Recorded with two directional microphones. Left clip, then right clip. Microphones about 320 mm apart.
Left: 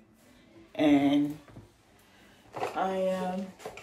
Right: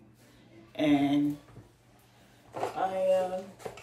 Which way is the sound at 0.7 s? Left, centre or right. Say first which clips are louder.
Left 2 dB; left.